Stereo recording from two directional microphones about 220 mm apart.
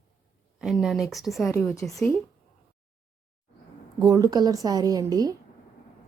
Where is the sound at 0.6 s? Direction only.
Centre (ahead or behind).